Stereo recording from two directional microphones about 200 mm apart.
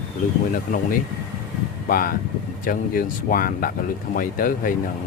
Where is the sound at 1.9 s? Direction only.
45° left (ahead or behind).